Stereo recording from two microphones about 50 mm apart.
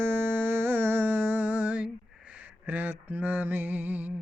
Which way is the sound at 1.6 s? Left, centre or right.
Right.